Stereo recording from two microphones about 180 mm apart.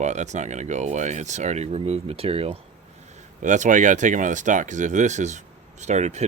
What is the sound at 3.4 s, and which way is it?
Speech, 45° right (ahead or behind).